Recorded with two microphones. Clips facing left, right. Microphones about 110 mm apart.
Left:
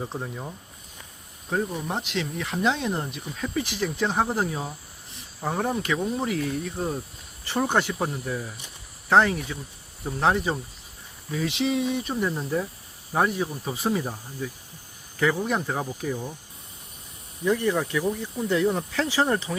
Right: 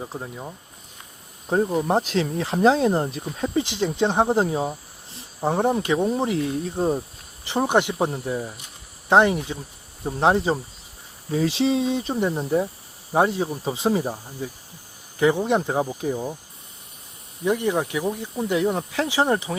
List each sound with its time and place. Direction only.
0.0 s speech: 5° right (ahead or behind)
1.5 s speech: 35° right (ahead or behind)
7.4 s speech: 20° right (ahead or behind)
15.2 s speech: 25° right (ahead or behind)
17.4 s speech: 20° right (ahead or behind)